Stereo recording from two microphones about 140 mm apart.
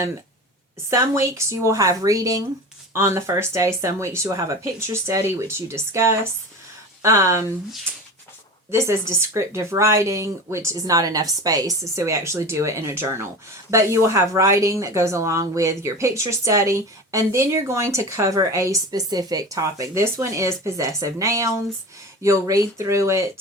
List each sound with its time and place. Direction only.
0.9 s speech: 20° right (ahead or behind)
8.7 s speech: 20° right (ahead or behind)